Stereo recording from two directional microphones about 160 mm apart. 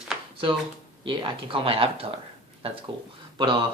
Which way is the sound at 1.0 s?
30° right (ahead or behind).